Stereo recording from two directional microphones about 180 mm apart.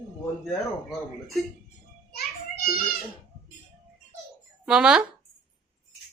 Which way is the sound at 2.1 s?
55° left (ahead or behind).